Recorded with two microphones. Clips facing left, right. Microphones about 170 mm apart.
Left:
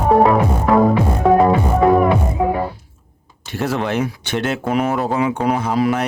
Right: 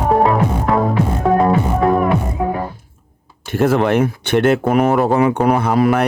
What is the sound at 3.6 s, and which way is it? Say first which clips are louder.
Speech: right 6 dB; 55° right (ahead or behind).